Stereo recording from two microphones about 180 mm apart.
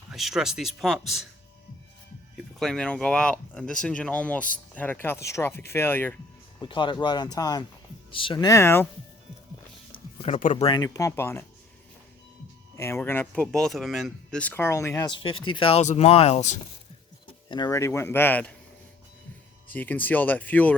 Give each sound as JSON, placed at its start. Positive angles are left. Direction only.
{"t": 0.1, "sound": "speech", "side_deg": 0}
{"t": 2.6, "sound": "speech", "side_deg": 5}
{"t": 6.6, "sound": "speech", "side_deg": 25}
{"t": 10.2, "sound": "speech", "side_deg": 40}
{"t": 10.7, "sound": "speech", "side_deg": 20}
{"t": 12.7, "sound": "speech", "side_deg": 15}
{"t": 17.5, "sound": "speech", "side_deg": 20}
{"t": 19.6, "sound": "speech", "side_deg": 10}